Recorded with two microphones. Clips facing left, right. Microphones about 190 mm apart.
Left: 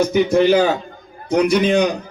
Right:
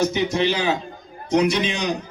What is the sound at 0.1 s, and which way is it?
A man's voice, 55° left (ahead or behind).